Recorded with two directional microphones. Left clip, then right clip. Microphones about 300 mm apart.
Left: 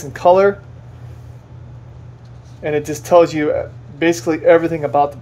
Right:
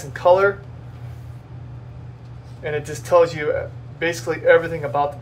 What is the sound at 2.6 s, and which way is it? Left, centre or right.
Speech, left.